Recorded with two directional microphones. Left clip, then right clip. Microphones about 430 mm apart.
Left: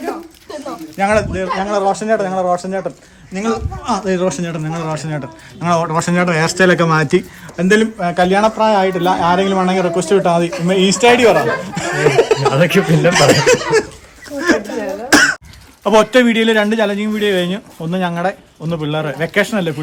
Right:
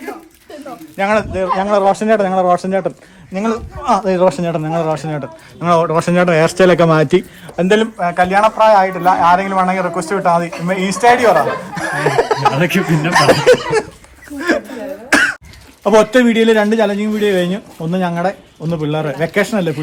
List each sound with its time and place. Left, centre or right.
0.9 s speech: centre
11.0 s speech: centre
11.3 s speech: centre
14.4 s throat clearing: centre
15.8 s speech: centre